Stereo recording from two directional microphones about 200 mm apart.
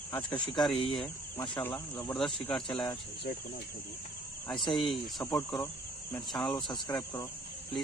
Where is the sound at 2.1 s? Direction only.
Centre (ahead or behind).